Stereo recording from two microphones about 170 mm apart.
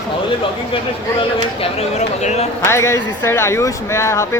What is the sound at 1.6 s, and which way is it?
Speech, 40° left (ahead or behind).